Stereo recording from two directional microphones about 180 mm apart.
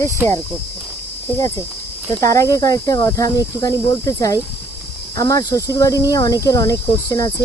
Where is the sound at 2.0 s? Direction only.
15° left (ahead or behind).